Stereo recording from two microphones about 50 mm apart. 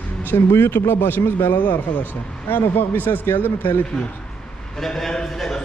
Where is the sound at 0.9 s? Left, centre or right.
Left.